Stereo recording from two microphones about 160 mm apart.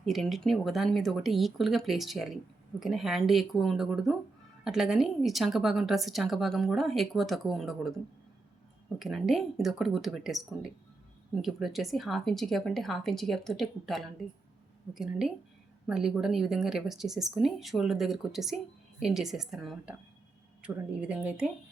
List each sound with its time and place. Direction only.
0.0 s speech: centre (ahead or behind)
9.0 s speech: centre (ahead or behind)